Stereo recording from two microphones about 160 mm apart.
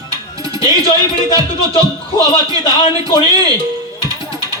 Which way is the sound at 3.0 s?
25° right (ahead or behind).